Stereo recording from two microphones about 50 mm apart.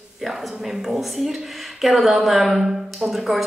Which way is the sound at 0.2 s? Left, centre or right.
Centre.